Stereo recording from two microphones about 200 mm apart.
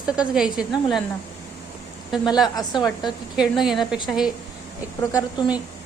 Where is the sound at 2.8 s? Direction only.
Centre (ahead or behind).